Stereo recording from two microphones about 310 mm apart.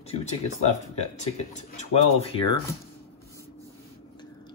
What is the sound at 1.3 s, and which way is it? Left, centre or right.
Speech, left.